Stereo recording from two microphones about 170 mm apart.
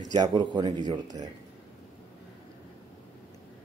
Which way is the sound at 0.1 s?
25° right (ahead or behind).